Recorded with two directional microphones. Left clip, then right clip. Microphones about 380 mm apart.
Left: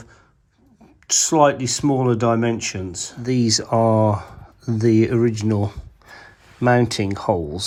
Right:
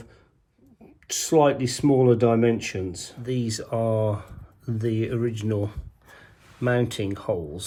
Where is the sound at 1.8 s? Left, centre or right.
Left.